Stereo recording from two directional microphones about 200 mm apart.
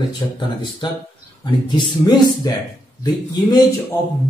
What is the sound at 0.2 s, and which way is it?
Speech, 20° left (ahead or behind).